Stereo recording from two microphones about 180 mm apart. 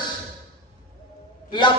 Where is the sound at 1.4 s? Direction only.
25° left (ahead or behind).